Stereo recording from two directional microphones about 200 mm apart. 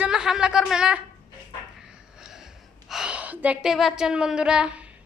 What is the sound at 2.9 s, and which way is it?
A woman's voice, 5° right (ahead or behind).